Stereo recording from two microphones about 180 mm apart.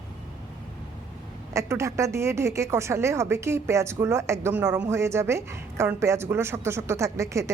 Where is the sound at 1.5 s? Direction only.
15° right (ahead or behind).